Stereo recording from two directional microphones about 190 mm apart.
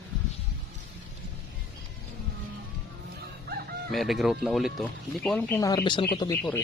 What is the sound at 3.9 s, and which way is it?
Speech, centre (ahead or behind).